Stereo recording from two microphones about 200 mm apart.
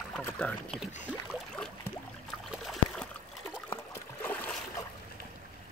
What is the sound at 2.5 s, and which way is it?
Trickle, centre (ahead or behind).